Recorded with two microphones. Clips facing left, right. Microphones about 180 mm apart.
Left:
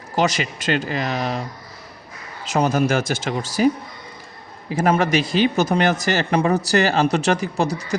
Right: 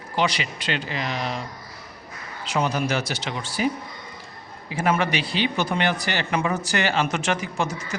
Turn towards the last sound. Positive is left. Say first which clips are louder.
# left 6 dB
turn(degrees=35)  # may be behind; listen again after turning